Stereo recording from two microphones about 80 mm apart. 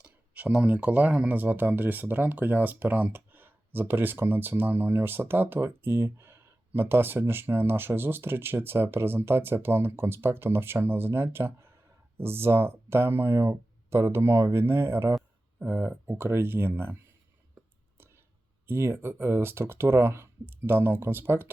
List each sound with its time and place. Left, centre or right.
0.0 s speech: centre
18.7 s speech: right